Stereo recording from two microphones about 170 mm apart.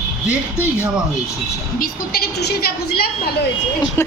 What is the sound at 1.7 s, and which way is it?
A woman's voice, 60° left (ahead or behind).